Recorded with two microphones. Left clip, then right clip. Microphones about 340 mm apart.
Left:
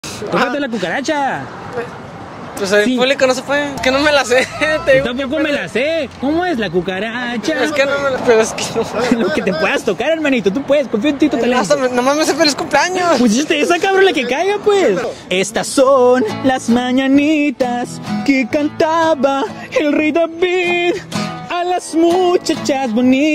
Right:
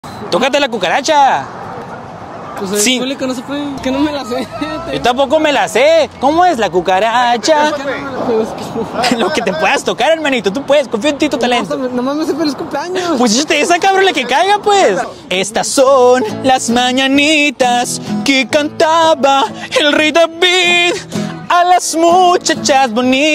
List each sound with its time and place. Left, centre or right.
0.5 s speech: right
2.6 s speech: left
5.0 s speech: right
9.1 s speech: right
11.6 s speech: left
13.2 s speech: right
15.3 s music: centre
21.5 s speech: right